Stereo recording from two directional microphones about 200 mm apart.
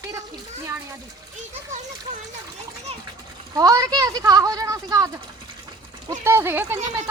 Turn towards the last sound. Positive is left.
turn(degrees=-10)  # may be behind; listen again after turning